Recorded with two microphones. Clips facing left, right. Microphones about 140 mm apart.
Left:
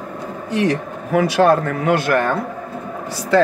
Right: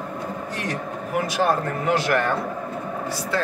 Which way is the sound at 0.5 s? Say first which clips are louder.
Left 9 dB; 90° left.